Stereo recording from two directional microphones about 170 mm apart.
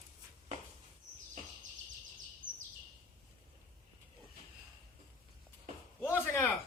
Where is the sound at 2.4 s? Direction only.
50° right (ahead or behind).